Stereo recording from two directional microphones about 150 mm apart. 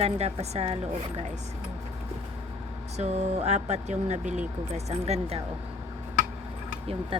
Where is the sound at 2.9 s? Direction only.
45° right (ahead or behind).